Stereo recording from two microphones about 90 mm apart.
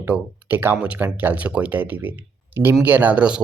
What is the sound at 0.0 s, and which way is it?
Speech, 20° right (ahead or behind).